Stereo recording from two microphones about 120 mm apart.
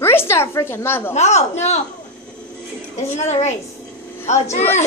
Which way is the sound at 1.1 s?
70° left (ahead or behind).